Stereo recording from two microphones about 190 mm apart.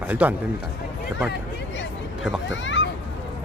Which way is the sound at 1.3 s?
75° left (ahead or behind).